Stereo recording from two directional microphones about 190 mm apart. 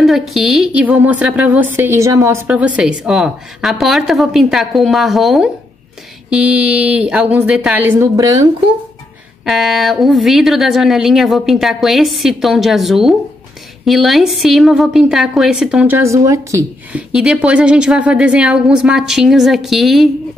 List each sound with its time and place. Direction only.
0.0 s a woman's voice: centre (ahead or behind); by 8.5 s 20° right (ahead or behind)
9.4 s a woman's voice: centre (ahead or behind)
17.1 s a woman's voice: 5° right (ahead or behind)